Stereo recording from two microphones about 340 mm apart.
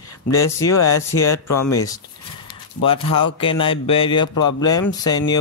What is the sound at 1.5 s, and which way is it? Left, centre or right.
Speech, left.